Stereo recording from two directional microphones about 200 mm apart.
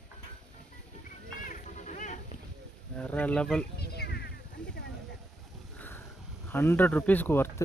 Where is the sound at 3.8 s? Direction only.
55° left (ahead or behind).